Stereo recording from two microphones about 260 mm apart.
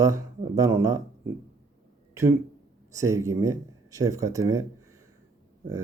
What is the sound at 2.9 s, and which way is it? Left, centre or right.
A man's voice, centre.